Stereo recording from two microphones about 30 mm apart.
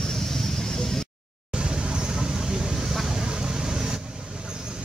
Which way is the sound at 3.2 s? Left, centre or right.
Right.